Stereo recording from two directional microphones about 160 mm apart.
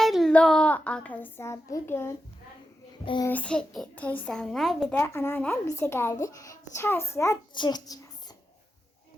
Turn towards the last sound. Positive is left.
turn(degrees=25)  # may be behind; listen again after turning